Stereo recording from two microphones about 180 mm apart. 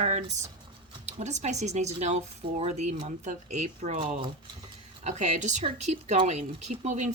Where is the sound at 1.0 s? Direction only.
40° right (ahead or behind).